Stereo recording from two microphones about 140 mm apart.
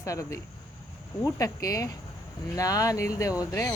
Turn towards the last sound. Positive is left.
turn(degrees=25)  # may be behind; listen again after turning